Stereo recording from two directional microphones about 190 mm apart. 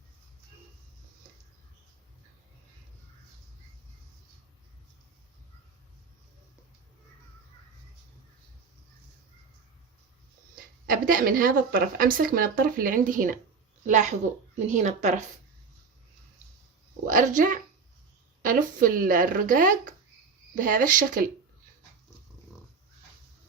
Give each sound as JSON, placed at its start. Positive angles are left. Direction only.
{"t": 10.5, "sound": "a woman's voice", "side_deg": -50}
{"t": 17.1, "sound": "a woman's voice", "side_deg": -45}